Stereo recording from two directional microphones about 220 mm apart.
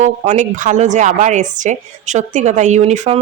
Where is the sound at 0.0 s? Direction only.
35° right (ahead or behind).